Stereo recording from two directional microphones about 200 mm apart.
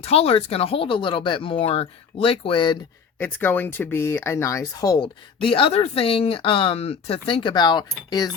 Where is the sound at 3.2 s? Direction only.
10° left (ahead or behind).